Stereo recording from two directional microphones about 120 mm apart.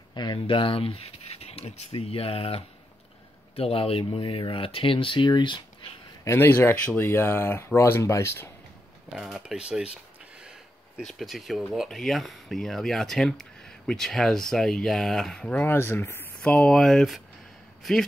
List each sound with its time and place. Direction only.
0.1 s speech: 40° left (ahead or behind)
6.2 s speech: 20° left (ahead or behind)
9.1 s speech: 5° right (ahead or behind)
11.1 s speech: centre (ahead or behind)